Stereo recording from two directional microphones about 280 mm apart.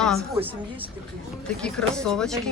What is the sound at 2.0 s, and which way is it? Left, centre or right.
Speech, centre.